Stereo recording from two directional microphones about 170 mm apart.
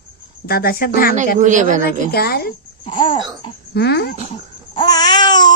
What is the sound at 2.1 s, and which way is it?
Speech, 65° left (ahead or behind).